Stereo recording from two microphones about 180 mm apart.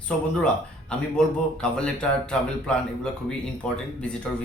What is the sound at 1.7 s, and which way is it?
Speech, 5° left (ahead or behind).